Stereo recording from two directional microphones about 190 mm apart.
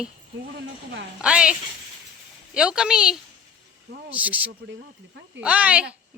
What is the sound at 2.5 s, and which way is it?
A woman's voice, 5° right (ahead or behind).